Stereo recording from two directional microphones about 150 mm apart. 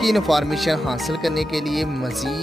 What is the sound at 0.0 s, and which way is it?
Speech, centre (ahead or behind).